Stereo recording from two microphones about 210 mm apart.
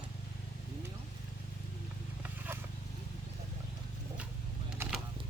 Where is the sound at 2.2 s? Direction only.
10° right (ahead or behind).